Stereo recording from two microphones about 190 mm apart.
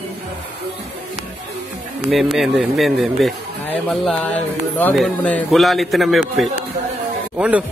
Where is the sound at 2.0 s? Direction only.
Centre (ahead or behind).